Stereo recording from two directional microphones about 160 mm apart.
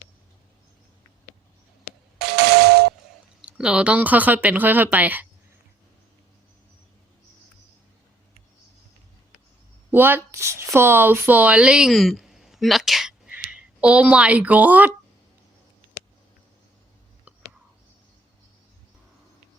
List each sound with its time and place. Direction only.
2.3 s doorbell: 85° right
3.4 s speech: 5° right (ahead or behind)
9.9 s speech: 15° right (ahead or behind)